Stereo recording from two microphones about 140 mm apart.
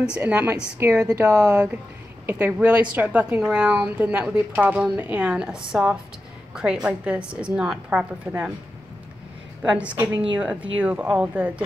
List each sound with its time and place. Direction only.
0.0 s a woman's voice: 10° right (ahead or behind)
1.5 s a woman's voice: 10° right (ahead or behind)
9.6 s a woman's voice: 10° right (ahead or behind)